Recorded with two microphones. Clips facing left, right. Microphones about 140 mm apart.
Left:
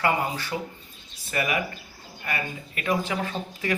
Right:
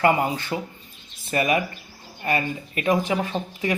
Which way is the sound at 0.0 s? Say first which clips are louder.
Right 5 dB; 25° right (ahead or behind).